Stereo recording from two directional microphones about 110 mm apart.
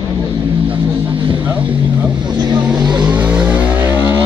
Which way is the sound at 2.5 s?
40° right (ahead or behind).